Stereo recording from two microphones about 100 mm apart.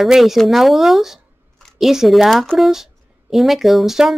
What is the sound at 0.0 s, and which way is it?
A woman's voice, centre (ahead or behind).